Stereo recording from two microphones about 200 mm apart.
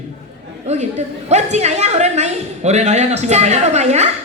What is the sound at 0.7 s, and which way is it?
A woman's voice, 35° right (ahead or behind).